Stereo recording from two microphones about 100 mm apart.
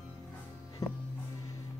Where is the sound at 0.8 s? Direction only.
35° left (ahead or behind).